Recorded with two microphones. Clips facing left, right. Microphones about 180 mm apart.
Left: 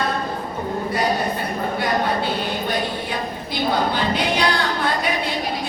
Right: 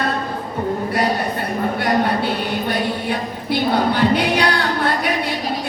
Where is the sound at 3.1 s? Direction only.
60° right (ahead or behind).